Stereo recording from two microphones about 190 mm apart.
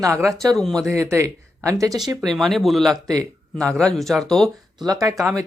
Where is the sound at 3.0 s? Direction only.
20° right (ahead or behind).